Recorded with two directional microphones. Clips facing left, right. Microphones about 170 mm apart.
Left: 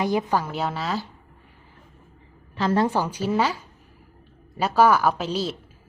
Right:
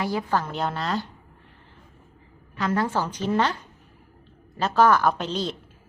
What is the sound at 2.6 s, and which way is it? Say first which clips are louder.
Speech: left 3 dB; 30° left (ahead or behind).